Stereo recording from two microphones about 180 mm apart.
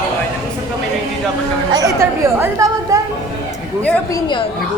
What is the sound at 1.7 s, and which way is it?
Speech, 20° right (ahead or behind).